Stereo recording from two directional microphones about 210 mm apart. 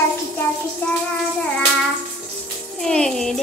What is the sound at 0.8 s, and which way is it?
Child singing, 10° left (ahead or behind).